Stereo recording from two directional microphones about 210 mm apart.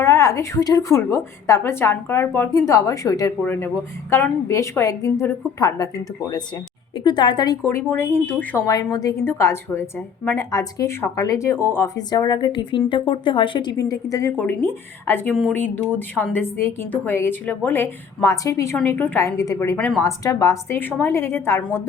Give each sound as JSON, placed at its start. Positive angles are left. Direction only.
{"t": 0.0, "sound": "a woman's voice", "side_deg": 15}
{"t": 7.0, "sound": "a woman's voice", "side_deg": 20}